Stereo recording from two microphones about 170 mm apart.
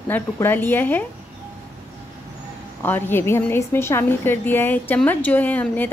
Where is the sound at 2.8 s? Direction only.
10° left (ahead or behind).